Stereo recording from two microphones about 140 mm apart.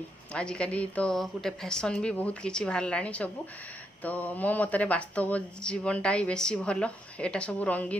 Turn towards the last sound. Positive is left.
turn(degrees=10)  # may be behind; listen again after turning